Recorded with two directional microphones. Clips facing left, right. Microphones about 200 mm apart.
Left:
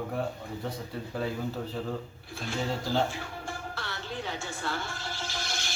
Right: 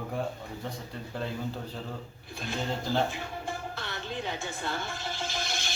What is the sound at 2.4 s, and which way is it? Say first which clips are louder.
Speech: left 1 dB; 20° right (ahead or behind).